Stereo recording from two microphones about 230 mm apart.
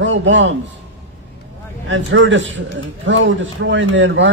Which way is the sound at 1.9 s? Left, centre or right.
Right.